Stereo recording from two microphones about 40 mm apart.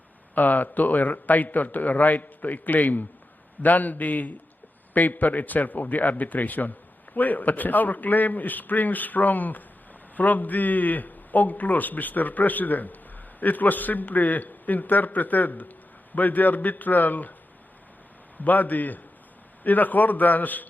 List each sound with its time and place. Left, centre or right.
0.3 s a man's voice: left
18.3 s a man's voice: left